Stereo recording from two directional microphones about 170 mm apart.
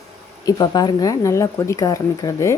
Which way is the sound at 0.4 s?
25° left (ahead or behind).